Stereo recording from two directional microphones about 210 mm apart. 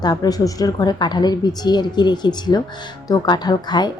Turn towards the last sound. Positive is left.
turn(degrees=20)  # may be behind; listen again after turning